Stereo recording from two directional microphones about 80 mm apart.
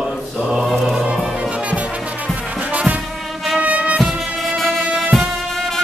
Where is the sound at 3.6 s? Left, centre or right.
Centre.